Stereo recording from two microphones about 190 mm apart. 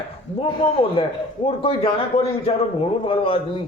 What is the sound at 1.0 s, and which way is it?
A man's voice, 30° left (ahead or behind).